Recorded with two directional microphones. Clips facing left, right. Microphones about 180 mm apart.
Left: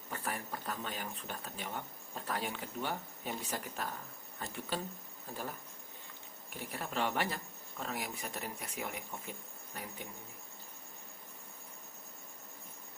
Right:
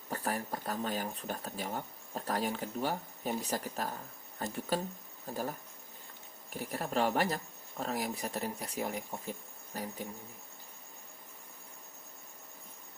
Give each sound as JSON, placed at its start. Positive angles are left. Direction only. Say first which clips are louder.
{"t": 0.1, "sound": "speech", "louder": "right 5 dB", "side_deg": -40}
{"t": 6.5, "sound": "speech", "louder": "right 6 dB", "side_deg": -40}